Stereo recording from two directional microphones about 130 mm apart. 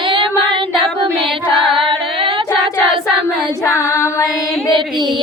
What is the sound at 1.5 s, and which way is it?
Singing, 45° right (ahead or behind).